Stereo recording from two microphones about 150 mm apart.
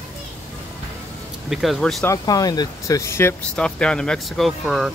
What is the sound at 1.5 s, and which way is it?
Speech, centre (ahead or behind).